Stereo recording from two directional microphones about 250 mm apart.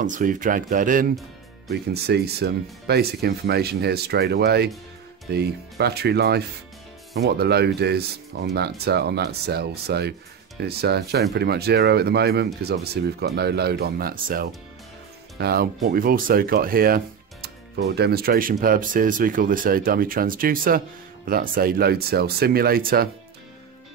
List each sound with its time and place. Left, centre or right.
0.0 s speech: right